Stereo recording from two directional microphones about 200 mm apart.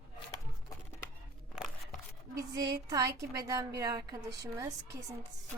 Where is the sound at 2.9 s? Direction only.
15° right (ahead or behind).